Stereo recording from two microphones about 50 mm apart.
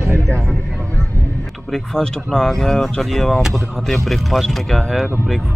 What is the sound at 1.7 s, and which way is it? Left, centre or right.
Speech, centre.